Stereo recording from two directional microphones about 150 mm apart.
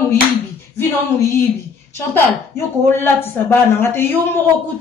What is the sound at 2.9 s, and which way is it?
A man's voice, 15° left (ahead or behind).